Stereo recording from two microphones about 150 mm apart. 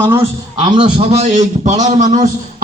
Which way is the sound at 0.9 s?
45° right (ahead or behind).